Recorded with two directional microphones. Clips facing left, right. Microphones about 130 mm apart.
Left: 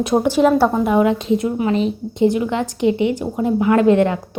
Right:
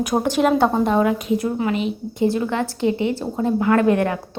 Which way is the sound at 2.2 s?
20° left (ahead or behind).